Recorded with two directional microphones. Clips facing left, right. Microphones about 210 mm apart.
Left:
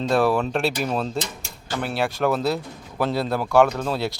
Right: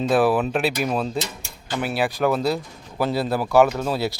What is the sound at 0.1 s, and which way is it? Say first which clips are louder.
Speech: right 1 dB; 5° right (ahead or behind).